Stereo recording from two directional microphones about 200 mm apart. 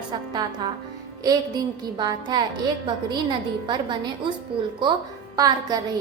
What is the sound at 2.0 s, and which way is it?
Speech, 20° right (ahead or behind).